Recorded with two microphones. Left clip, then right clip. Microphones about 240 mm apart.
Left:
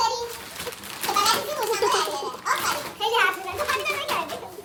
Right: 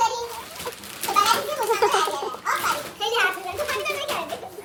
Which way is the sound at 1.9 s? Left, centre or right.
Centre.